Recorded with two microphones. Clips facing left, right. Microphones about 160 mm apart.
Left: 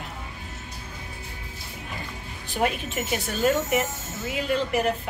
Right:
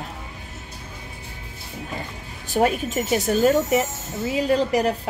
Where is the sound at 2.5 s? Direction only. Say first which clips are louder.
Right 6 dB; 40° right (ahead or behind).